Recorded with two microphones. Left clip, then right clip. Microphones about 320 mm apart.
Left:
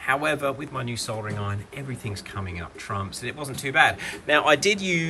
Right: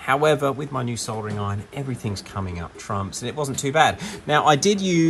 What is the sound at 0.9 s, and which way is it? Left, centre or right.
Speech, centre.